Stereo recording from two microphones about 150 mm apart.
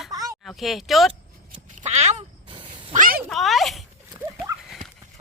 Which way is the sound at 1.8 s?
50° right (ahead or behind).